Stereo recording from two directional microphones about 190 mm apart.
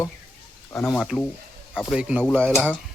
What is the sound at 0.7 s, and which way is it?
Speech, 5° left (ahead or behind).